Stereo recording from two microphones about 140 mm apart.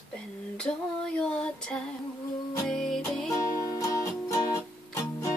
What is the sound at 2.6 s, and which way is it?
Music, 5° left (ahead or behind).